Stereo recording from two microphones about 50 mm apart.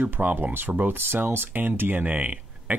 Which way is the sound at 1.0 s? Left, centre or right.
Right.